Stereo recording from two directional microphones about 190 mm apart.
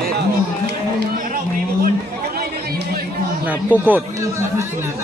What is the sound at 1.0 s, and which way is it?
Speech, 50° right (ahead or behind).